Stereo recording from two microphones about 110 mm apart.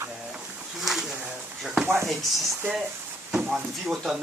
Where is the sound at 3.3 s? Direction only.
5° right (ahead or behind).